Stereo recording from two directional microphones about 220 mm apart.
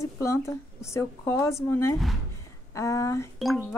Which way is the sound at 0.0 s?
15° left (ahead or behind).